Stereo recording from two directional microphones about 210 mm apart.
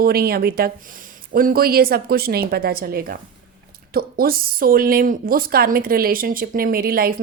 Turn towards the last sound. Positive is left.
turn(degrees=-45)  # may be behind; listen again after turning